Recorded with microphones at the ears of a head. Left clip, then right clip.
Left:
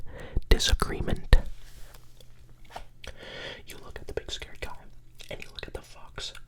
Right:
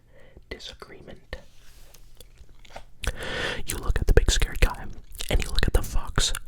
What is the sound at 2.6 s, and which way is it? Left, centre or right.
Chewing, right.